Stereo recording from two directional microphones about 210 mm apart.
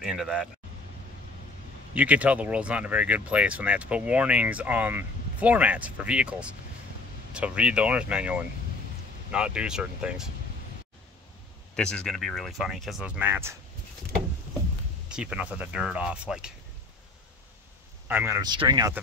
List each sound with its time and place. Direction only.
0.0 s speech: centre (ahead or behind)
2.0 s speech: 5° right (ahead or behind)
11.7 s speech: 5° left (ahead or behind)
15.0 s speech: 5° right (ahead or behind)
18.0 s speech: 10° right (ahead or behind)